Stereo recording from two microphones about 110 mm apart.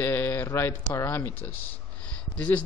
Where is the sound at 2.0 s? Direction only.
10° left (ahead or behind).